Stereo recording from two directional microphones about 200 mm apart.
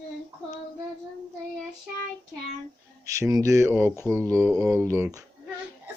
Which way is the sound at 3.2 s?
15° right (ahead or behind).